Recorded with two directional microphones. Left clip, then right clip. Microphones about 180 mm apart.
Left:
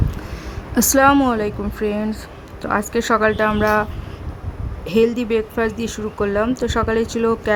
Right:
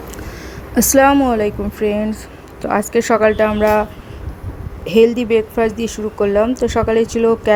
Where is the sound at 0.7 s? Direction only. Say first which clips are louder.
Right 2 dB; 10° right (ahead or behind).